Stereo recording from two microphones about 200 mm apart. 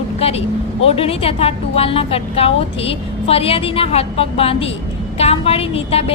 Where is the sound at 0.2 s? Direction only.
30° left (ahead or behind).